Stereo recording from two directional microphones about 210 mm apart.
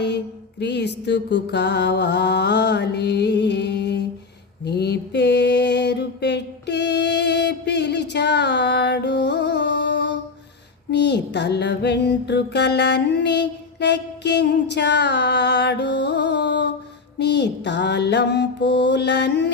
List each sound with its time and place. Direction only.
0.6 s mantra: 55° left (ahead or behind)
10.9 s music: 55° left (ahead or behind)
17.2 s mantra: 55° left (ahead or behind)